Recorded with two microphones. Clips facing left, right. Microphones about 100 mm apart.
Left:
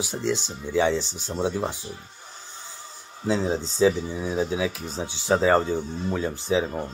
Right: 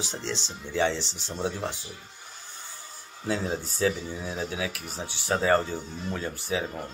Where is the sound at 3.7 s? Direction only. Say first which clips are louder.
Left 7 dB; 15° left (ahead or behind).